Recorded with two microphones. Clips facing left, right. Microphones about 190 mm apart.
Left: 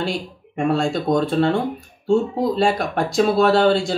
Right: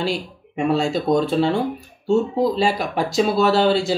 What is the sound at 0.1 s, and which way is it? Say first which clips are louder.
Speech: right 1 dB; centre (ahead or behind).